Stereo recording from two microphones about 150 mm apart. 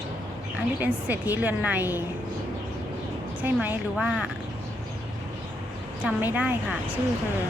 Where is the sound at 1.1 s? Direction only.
10° right (ahead or behind).